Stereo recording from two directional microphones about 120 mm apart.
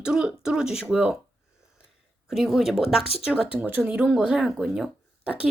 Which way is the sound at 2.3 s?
Centre (ahead or behind).